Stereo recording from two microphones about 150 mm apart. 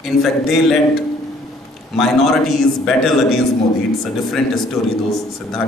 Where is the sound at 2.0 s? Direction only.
Centre (ahead or behind).